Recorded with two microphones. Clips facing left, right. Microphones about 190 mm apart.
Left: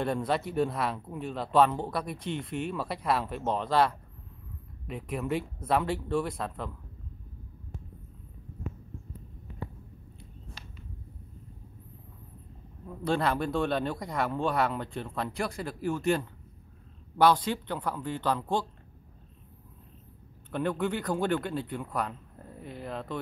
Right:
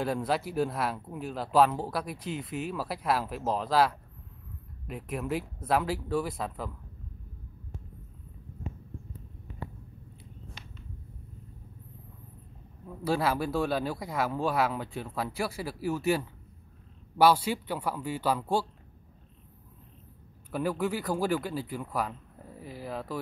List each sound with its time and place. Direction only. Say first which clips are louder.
0.0 s speech: even; 5° right (ahead or behind)
12.8 s speech: even; 5° right (ahead or behind)
20.5 s speech: even; 5° right (ahead or behind)